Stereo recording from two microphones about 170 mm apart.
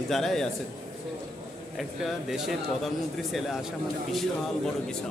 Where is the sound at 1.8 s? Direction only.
Centre (ahead or behind).